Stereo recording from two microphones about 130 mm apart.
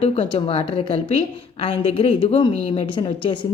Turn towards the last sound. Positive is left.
turn(degrees=40)  # may be behind; listen again after turning